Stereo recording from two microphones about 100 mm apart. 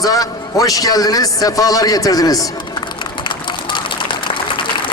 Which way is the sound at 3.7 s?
55° left (ahead or behind).